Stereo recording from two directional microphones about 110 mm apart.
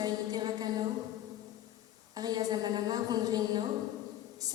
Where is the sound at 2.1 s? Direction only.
35° right (ahead or behind).